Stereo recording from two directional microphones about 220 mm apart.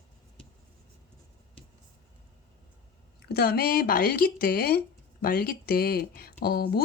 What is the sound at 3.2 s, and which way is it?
Speech, 45° left (ahead or behind).